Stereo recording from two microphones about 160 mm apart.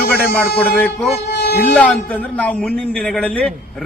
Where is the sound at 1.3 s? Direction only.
90° left.